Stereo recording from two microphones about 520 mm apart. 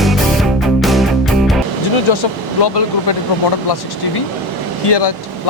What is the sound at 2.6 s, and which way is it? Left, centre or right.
Speech, left.